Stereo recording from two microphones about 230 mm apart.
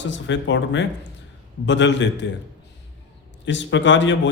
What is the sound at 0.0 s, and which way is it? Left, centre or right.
A man's voice, left.